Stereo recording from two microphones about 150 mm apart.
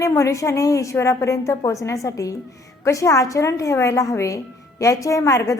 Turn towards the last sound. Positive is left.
turn(degrees=20)  # may be behind; listen again after turning